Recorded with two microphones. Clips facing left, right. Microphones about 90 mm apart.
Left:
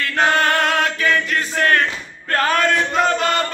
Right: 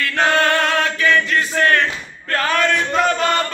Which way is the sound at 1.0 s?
35° left (ahead or behind).